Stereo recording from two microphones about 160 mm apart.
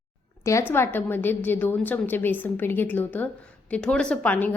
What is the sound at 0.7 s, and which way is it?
A woman's voice, 15° left (ahead or behind).